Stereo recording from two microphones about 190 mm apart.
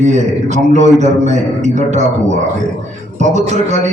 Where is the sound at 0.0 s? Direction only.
40° right (ahead or behind).